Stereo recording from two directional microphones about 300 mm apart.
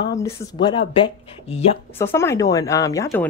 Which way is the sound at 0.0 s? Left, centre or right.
Centre.